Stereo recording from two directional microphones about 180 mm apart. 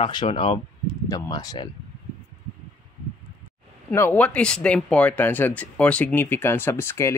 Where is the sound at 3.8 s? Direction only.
10° left (ahead or behind).